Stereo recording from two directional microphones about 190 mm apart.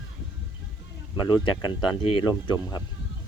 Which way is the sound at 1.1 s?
20° left (ahead or behind).